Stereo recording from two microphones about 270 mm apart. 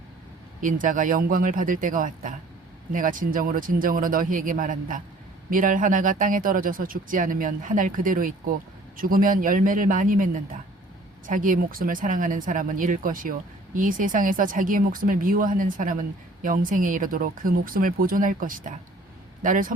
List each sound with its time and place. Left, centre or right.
0.6 s speech: right
11.3 s speech: right